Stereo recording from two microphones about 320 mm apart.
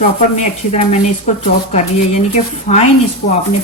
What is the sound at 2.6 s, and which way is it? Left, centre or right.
Speech, left.